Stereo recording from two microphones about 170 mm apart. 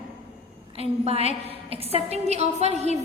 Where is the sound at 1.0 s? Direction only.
35° right (ahead or behind).